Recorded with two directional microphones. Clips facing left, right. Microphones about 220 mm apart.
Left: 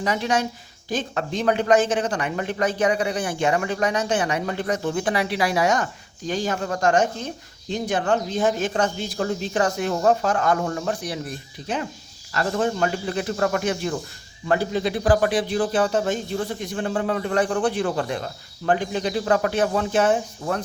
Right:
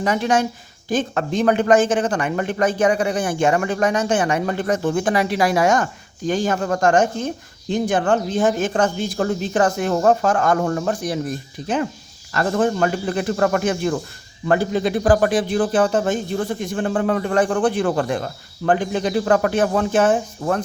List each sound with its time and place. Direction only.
0.0 s speech: 50° right (ahead or behind)